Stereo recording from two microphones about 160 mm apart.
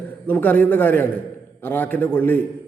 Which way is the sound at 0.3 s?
10° left (ahead or behind).